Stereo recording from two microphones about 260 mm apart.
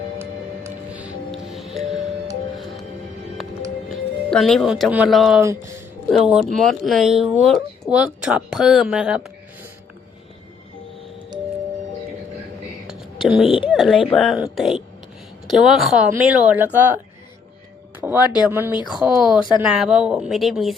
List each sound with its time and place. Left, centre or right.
0.6 s music: centre
3.8 s speech: centre
12.9 s whispering: centre
13.7 s speech: centre
18.0 s a sound: centre
18.9 s speech: centre
19.4 s speech: centre
19.6 s speech: centre